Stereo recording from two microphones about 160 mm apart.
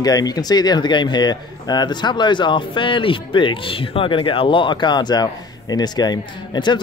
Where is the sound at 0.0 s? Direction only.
25° left (ahead or behind).